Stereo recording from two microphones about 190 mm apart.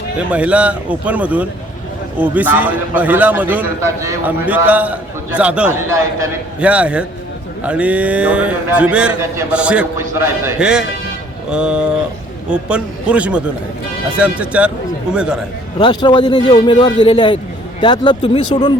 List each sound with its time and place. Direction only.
0.2 s a man's voice: 5° right (ahead or behind)
15.8 s a man's voice: 25° left (ahead or behind)